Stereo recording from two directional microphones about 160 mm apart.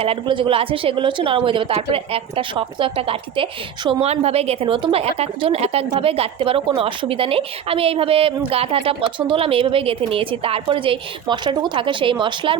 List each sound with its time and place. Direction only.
0.0 s a woman's voice: 35° right (ahead or behind)